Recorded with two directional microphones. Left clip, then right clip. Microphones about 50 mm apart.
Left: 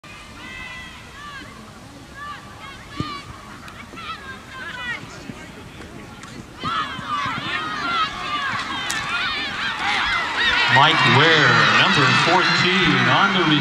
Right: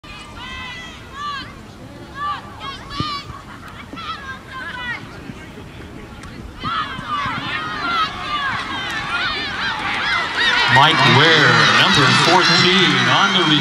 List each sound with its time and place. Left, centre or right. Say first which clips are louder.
0.5 s run: right 3 dB; right
2.3 s a sound: right 7 dB; right
4.6 s vehicle: right 2 dB; right
6.6 s run: right 2 dB; centre
9.1 s honk: right 4 dB; right
10.0 s a man's voice: right 6 dB; right